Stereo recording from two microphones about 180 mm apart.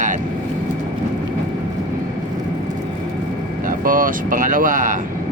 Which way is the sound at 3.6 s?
50° right (ahead or behind).